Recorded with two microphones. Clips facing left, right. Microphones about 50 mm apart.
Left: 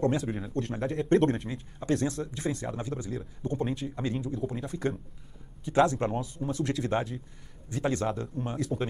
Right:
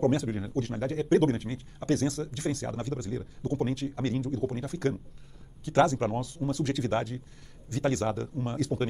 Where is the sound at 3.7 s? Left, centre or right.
Centre.